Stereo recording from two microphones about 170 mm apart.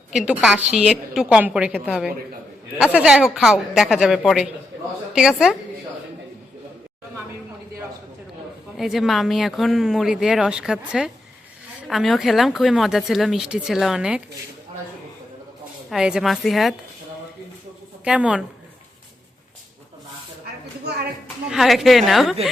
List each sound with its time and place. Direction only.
0.1 s speech: 5° right (ahead or behind)
8.7 s speech: centre (ahead or behind)
15.9 s speech: 5° right (ahead or behind)
18.0 s speech: 5° right (ahead or behind)
20.9 s a woman's voice: 75° right (ahead or behind)
21.5 s speech: centre (ahead or behind)